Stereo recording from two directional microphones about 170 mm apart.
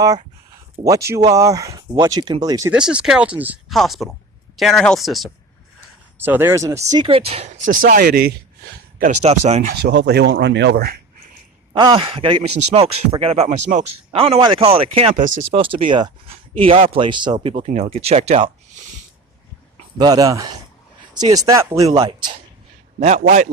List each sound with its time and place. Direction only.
0.9 s speech: 20° right (ahead or behind)
2.7 s speech: 5° right (ahead or behind)
6.1 s speech: 10° right (ahead or behind); by 7.7 s 35° right (ahead or behind)
7.7 s speech: 55° right (ahead or behind)
9.2 s speech: 40° right (ahead or behind)
9.9 s speech: 85° right
11.7 s speech: 30° right (ahead or behind); by 14.2 s 45° right (ahead or behind)
14.2 s speech: 35° right (ahead or behind)
20.0 s speech: 20° right (ahead or behind)
23.0 s a man's voice: 40° right (ahead or behind)